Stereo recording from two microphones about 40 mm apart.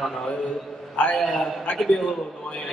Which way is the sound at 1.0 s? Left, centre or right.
Left.